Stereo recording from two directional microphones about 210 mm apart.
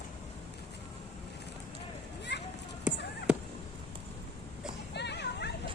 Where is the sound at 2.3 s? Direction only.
55° left (ahead or behind).